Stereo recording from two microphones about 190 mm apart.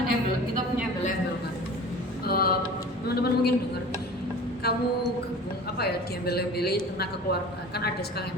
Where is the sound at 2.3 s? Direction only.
50° left (ahead or behind).